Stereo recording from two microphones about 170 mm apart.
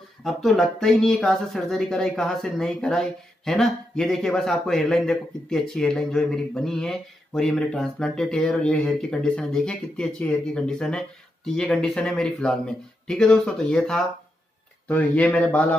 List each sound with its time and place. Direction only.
0.2 s a man's voice: centre (ahead or behind)